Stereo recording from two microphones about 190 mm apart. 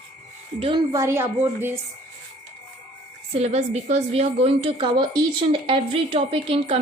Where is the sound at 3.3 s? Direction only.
35° right (ahead or behind).